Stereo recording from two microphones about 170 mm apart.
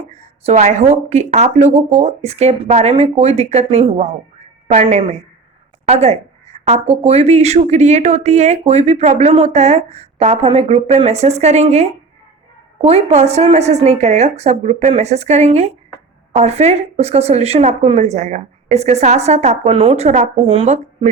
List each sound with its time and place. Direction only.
0.1 s speech: 40° right (ahead or behind)